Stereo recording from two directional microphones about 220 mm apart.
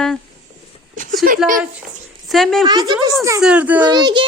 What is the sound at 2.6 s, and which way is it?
Speech, 20° right (ahead or behind).